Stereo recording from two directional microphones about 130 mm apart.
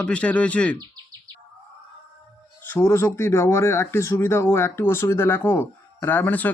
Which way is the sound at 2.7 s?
20° left (ahead or behind).